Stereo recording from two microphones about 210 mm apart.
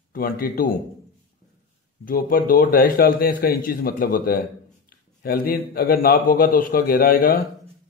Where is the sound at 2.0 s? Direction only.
40° left (ahead or behind).